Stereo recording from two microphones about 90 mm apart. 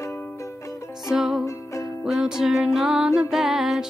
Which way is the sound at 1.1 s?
5° right (ahead or behind).